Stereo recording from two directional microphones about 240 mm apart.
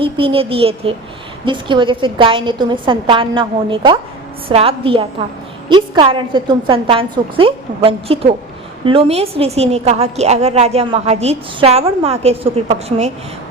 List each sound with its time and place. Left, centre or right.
0.0 s a woman's voice: right